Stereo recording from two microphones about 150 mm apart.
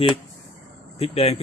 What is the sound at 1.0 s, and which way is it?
Speech, 40° left (ahead or behind).